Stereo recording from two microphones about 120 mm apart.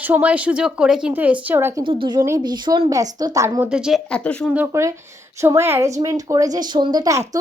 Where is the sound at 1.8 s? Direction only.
45° right (ahead or behind).